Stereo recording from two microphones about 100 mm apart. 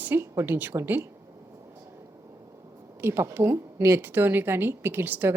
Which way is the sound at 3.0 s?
25° right (ahead or behind).